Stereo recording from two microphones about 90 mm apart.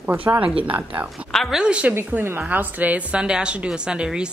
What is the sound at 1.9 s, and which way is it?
A woman's voice, 25° right (ahead or behind).